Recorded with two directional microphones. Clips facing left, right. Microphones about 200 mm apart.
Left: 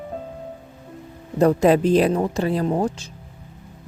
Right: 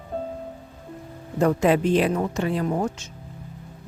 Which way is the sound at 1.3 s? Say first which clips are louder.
Left 4 dB; 35° left (ahead or behind).